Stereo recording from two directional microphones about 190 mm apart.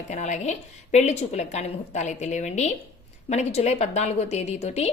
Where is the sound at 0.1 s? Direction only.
40° left (ahead or behind).